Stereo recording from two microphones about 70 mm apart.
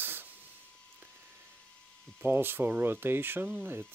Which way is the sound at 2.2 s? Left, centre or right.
Right.